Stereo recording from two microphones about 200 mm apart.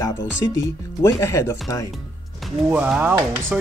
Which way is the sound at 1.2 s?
15° left (ahead or behind).